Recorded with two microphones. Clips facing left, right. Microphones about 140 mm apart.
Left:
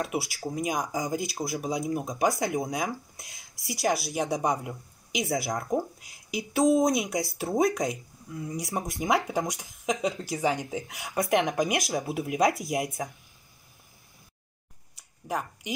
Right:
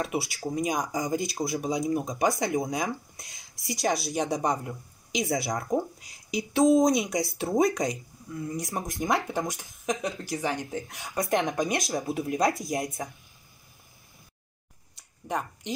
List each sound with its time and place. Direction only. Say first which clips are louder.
0.0 s speech: right 1 dB; centre (ahead or behind)
9.5 s speech: left 1 dB; 15° left (ahead or behind)
10.9 s speech: left 2 dB; centre (ahead or behind)
15.0 s a sound: right 1 dB; 5° left (ahead or behind)